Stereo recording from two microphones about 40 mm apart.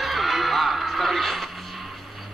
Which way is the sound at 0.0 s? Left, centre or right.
Centre.